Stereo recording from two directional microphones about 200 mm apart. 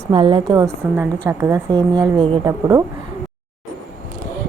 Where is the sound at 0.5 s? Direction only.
15° right (ahead or behind).